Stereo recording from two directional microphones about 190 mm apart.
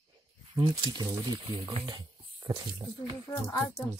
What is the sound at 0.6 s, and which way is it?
Speech, 20° right (ahead or behind).